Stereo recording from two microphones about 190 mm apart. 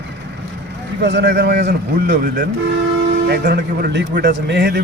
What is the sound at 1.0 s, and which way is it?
Speech, 65° right (ahead or behind).